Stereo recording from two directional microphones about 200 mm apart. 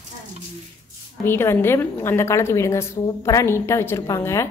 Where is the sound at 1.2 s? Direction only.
10° left (ahead or behind).